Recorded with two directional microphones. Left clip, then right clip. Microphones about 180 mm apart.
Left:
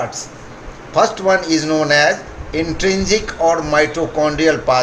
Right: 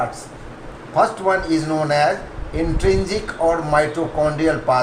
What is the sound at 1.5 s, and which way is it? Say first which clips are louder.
A man's voice: left 4 dB; 55° left (ahead or behind).